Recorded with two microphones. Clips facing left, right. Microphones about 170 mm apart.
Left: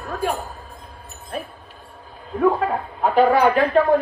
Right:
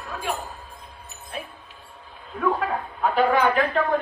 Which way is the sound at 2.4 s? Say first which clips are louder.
Left 5 dB; 35° left (ahead or behind).